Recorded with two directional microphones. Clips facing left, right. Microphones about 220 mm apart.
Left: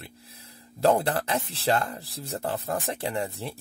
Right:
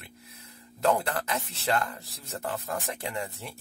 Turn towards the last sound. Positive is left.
turn(degrees=30)  # may be behind; listen again after turning